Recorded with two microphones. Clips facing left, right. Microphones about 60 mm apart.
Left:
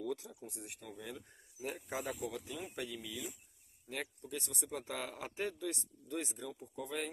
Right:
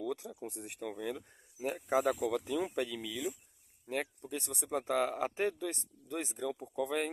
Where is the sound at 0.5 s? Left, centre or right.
Right.